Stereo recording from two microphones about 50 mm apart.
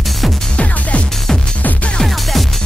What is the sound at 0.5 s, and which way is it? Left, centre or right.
Music, left.